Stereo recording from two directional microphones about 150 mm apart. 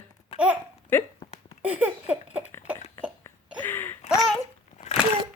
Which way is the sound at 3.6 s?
15° left (ahead or behind).